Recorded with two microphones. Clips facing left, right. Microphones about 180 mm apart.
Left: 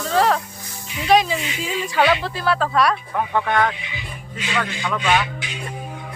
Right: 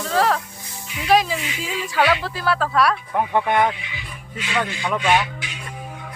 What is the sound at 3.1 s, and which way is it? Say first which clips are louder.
Speech: right 4 dB; 15° right (ahead or behind).